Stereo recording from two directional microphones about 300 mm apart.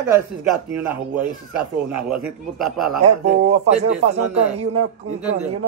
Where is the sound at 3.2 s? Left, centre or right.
Right.